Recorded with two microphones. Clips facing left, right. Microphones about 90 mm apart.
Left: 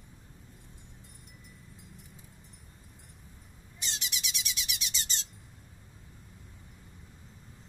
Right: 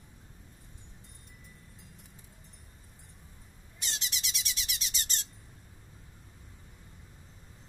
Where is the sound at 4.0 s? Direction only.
35° right (ahead or behind).